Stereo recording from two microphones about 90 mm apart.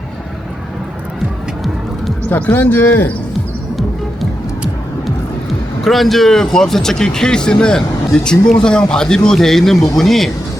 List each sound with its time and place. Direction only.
2.3 s speech: 20° left (ahead or behind)
5.8 s speech: centre (ahead or behind)